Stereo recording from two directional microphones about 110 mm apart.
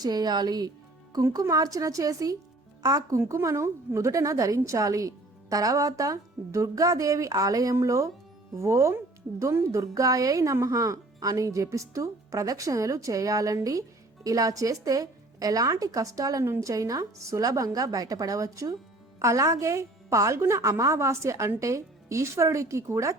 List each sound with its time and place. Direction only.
0.0 s a woman's voice: 40° right (ahead or behind)